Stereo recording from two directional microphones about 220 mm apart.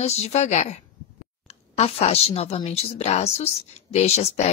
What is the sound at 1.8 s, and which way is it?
Speech, 25° left (ahead or behind).